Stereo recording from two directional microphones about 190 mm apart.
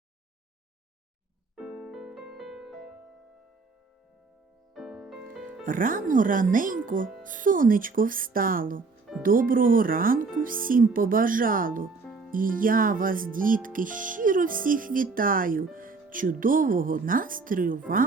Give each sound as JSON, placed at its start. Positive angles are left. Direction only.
{"t": 1.5, "sound": "music", "side_deg": -5}
{"t": 4.7, "sound": "music", "side_deg": 0}
{"t": 5.6, "sound": "speech", "side_deg": -45}